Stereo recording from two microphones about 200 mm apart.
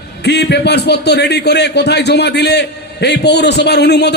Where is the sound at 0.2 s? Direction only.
55° left (ahead or behind).